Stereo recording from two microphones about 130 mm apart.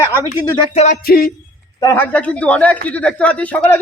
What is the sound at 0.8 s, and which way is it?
Music, 75° left (ahead or behind).